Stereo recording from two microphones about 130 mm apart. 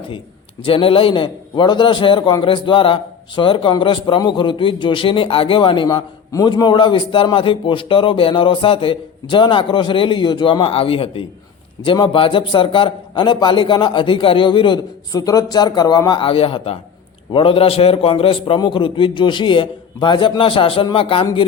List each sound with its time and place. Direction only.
0.6 s a man's voice: 45° left (ahead or behind)